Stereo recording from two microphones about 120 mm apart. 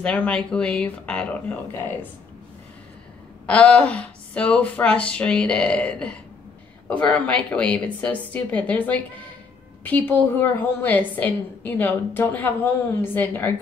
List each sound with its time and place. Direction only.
0.0 s speech: 10° left (ahead or behind)
3.4 s speech: 10° left (ahead or behind)